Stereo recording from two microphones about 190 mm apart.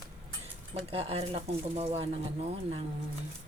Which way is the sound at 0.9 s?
30° right (ahead or behind).